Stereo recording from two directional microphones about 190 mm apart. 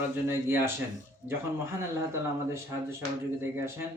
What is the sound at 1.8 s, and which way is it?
A man's voice, 15° right (ahead or behind).